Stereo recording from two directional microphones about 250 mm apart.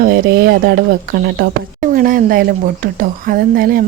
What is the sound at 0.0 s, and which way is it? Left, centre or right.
Speech, right.